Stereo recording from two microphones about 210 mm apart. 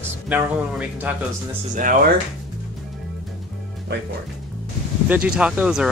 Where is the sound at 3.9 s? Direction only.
50° right (ahead or behind).